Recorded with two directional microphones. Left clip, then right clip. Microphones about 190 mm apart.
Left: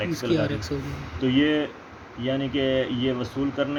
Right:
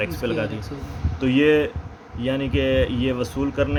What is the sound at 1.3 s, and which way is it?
Speech, 55° right (ahead or behind).